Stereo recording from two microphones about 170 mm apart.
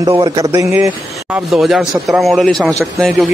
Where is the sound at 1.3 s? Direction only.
Centre (ahead or behind).